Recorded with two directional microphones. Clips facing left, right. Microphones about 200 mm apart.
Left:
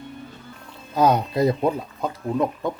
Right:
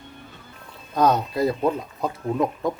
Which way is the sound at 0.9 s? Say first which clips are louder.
Left 1 dB; 10° left (ahead or behind).